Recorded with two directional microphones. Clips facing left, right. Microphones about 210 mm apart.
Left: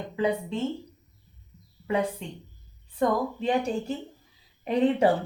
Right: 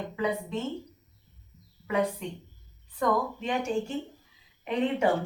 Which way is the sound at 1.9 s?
30° left (ahead or behind).